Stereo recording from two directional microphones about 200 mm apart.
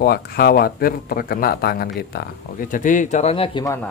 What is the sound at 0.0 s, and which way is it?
Speech, 50° left (ahead or behind).